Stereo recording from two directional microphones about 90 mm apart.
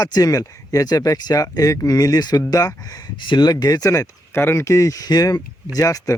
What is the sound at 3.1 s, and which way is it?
Speech, 60° left (ahead or behind).